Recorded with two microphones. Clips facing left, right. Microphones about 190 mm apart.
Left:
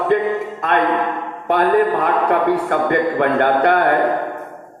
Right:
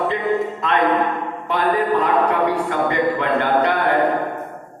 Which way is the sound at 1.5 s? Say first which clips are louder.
Left 4 dB; 55° left (ahead or behind).